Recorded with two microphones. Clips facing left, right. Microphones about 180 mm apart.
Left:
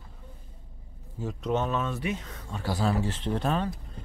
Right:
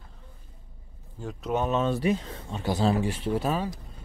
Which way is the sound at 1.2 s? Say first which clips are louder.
Even; 5° right (ahead or behind).